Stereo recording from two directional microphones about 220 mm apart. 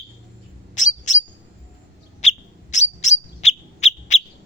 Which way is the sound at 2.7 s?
30° left (ahead or behind).